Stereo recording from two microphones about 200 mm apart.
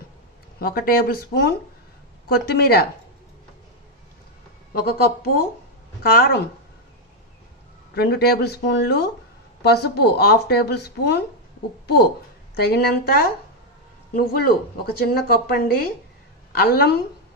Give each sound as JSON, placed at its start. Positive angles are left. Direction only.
{"t": 0.6, "sound": "speech", "side_deg": 45}
{"t": 4.8, "sound": "speech", "side_deg": 50}
{"t": 7.9, "sound": "speech", "side_deg": 55}
{"t": 12.5, "sound": "speech", "side_deg": 50}